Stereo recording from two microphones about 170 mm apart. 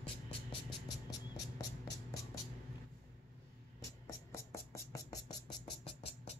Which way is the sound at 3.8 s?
15° left (ahead or behind).